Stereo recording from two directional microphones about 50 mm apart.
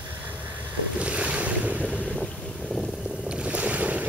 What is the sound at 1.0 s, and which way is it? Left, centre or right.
Boat, right.